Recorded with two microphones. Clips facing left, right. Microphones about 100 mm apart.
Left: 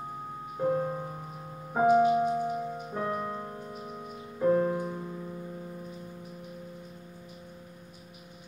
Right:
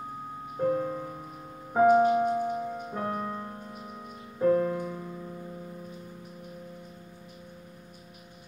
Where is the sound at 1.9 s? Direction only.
35° right (ahead or behind).